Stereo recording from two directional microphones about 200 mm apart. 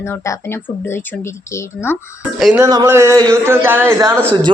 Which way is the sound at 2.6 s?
15° right (ahead or behind).